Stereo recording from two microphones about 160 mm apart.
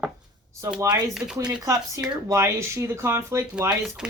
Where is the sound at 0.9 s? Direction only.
20° right (ahead or behind).